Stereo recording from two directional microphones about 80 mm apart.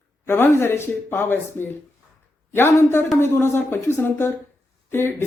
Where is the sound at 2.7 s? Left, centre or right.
Left.